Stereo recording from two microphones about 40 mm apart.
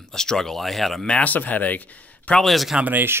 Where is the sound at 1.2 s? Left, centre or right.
Left.